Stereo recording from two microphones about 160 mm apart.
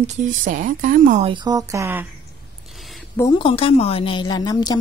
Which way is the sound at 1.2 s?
30° right (ahead or behind).